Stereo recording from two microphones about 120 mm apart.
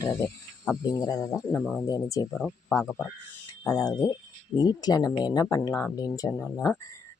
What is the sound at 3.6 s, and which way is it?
Speech, 30° left (ahead or behind).